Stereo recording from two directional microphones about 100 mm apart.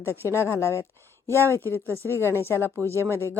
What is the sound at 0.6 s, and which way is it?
Speech, 25° left (ahead or behind).